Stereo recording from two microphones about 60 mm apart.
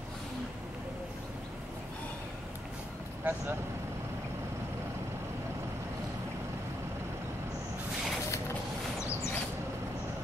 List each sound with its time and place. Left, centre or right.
3.3 s speech: right